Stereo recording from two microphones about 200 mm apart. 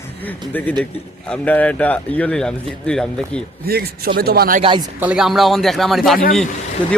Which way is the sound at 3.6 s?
50° right (ahead or behind).